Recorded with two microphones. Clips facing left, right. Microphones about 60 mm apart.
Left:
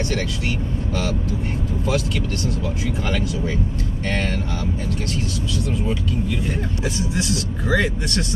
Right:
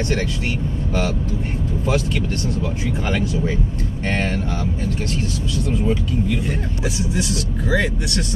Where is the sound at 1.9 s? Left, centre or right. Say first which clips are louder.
Right 2 dB; right.